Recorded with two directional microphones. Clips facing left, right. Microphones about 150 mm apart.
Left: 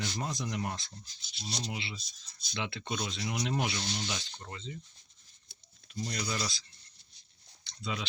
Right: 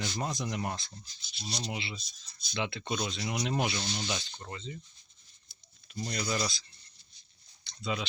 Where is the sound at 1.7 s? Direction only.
15° right (ahead or behind).